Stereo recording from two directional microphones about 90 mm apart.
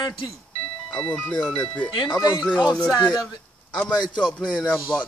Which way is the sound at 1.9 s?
55° left (ahead or behind).